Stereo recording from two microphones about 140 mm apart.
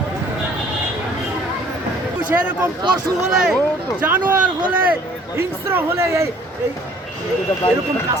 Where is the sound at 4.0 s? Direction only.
15° right (ahead or behind).